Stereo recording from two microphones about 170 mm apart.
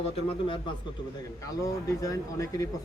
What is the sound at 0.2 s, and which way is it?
Speech, 30° left (ahead or behind).